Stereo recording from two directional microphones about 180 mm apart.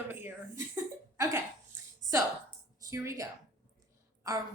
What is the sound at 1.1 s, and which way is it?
Hiccup, 20° right (ahead or behind).